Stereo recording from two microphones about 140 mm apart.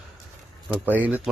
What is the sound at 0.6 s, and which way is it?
Speech, 10° right (ahead or behind).